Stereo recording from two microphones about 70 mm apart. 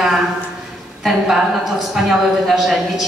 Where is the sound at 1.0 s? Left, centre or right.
Centre.